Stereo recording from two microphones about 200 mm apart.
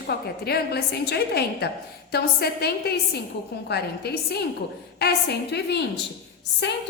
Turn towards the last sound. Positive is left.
turn(degrees=60)  # may be behind; listen again after turning